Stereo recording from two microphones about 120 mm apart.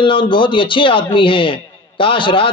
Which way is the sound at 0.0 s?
45° left (ahead or behind).